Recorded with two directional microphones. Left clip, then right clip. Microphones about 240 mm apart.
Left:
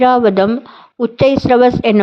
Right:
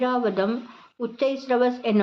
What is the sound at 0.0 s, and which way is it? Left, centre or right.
A woman's voice, left.